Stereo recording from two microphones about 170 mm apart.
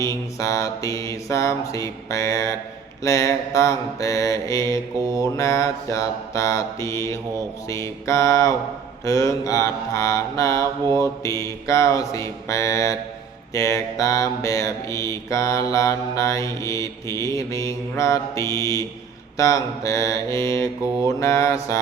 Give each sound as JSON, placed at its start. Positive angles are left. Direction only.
{"t": 0.0, "sound": "mantra", "side_deg": 20}